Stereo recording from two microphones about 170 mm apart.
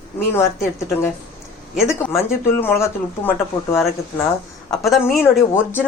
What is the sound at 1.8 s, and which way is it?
Speech, 15° left (ahead or behind).